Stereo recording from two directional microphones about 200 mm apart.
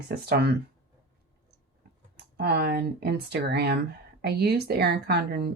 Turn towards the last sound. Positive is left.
turn(degrees=-50)  # may be behind; listen again after turning